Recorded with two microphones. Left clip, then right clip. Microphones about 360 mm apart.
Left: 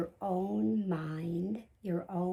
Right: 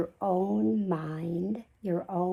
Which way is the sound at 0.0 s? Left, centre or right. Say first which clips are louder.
Right 6 dB; centre.